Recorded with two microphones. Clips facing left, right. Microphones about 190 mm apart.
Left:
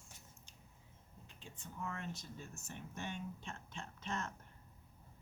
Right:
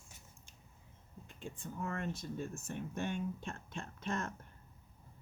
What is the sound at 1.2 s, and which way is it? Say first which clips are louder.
Speech: right 9 dB; 50° right (ahead or behind).